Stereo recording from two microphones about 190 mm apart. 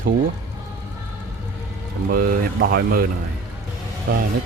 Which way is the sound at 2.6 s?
55° right (ahead or behind).